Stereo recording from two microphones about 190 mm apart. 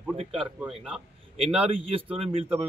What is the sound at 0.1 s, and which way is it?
A man's voice, 30° right (ahead or behind).